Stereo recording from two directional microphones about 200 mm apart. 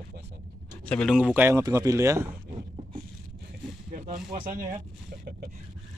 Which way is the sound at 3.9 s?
40° right (ahead or behind).